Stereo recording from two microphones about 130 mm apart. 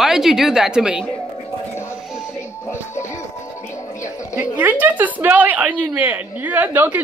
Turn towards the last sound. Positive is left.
turn(degrees=-15)  # may be behind; listen again after turning